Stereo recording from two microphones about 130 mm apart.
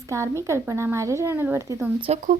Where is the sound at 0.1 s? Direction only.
20° right (ahead or behind).